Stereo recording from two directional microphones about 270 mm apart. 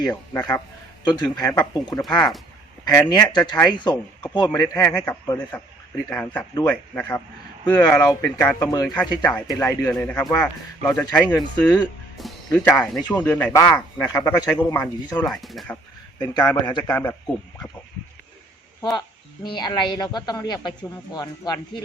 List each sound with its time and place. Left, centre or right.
0.1 s speech: centre
16.1 s speech: centre
18.8 s speech: centre